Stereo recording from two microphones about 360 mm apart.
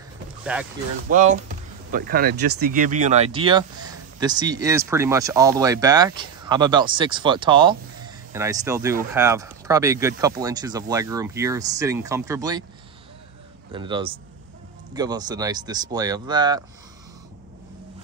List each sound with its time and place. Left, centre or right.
0.5 s speech: centre
1.1 s speech: right
13.7 s speech: centre